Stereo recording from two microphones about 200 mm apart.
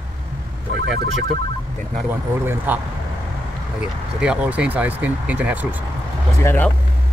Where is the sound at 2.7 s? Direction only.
10° right (ahead or behind).